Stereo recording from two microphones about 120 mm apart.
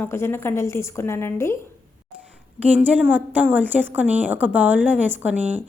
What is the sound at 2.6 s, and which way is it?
A woman's voice, 10° right (ahead or behind).